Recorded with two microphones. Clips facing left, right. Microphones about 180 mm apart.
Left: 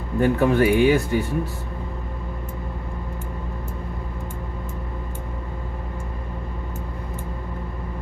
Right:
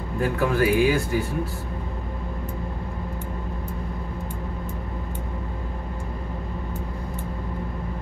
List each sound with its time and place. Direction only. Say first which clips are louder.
0.2 s speech: left 4 dB; 30° left (ahead or behind)